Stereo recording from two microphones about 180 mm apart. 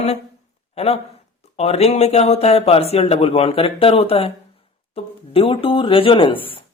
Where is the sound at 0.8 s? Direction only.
35° left (ahead or behind).